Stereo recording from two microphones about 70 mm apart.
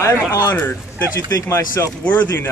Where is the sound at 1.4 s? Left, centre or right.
Left.